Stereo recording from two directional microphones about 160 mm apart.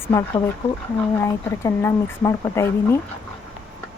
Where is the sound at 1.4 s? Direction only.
15° left (ahead or behind).